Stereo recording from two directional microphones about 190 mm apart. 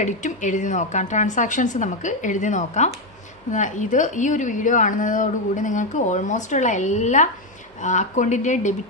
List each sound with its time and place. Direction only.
0.0 s a woman's voice: 40° left (ahead or behind)